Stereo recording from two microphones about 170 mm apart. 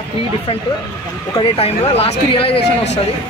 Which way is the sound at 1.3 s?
35° left (ahead or behind).